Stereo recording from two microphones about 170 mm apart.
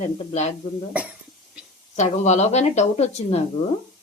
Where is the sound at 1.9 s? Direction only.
40° left (ahead or behind).